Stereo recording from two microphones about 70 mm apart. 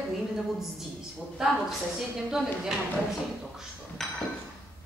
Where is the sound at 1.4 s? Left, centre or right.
Centre.